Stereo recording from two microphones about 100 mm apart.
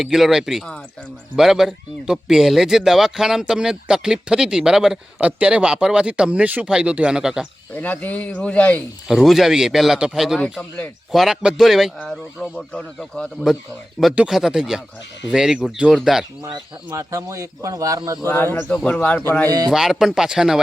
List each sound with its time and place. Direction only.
0.0 s speech: centre (ahead or behind)
7.8 s speech: 15° left (ahead or behind)
9.0 s speech: centre (ahead or behind)
16.4 s speech: 35° right (ahead or behind)
18.7 s speech: 10° left (ahead or behind)
19.5 s speech: 40° right (ahead or behind)
19.7 s speech: 5° right (ahead or behind)